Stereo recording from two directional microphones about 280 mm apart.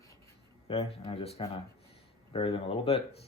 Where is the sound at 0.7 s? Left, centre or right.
Left.